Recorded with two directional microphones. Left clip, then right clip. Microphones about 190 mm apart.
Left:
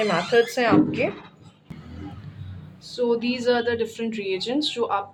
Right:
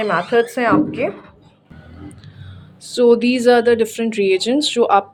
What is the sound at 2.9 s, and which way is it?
Speech, 40° right (ahead or behind).